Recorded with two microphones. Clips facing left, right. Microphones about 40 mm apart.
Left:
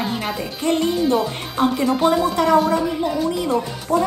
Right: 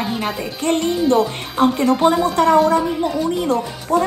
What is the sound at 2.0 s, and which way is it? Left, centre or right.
Speech, centre.